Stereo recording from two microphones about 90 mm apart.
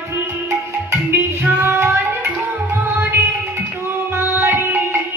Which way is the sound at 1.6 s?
20° right (ahead or behind).